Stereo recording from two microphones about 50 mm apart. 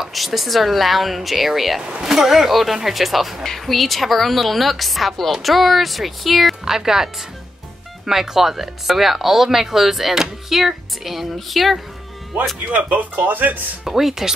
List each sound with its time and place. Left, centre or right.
0.0 s speech: centre
12.7 s speech: right
13.8 s speech: centre